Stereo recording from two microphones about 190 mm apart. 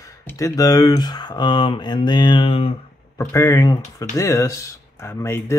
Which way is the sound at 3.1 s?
15° left (ahead or behind).